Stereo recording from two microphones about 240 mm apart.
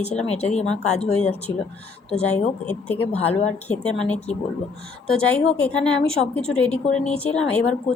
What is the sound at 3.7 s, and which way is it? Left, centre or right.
A woman's voice, centre.